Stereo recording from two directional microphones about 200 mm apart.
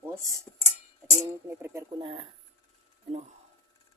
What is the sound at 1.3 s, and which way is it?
Speech, 15° right (ahead or behind).